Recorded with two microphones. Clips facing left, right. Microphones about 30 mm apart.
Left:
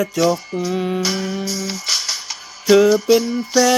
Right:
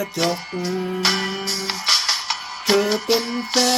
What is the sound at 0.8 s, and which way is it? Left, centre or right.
Music, left.